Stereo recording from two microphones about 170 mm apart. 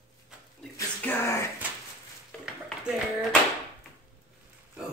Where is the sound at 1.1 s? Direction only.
15° left (ahead or behind).